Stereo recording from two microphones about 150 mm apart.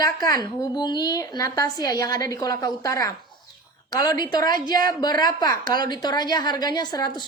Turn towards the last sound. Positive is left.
turn(degrees=25)  # may be behind; listen again after turning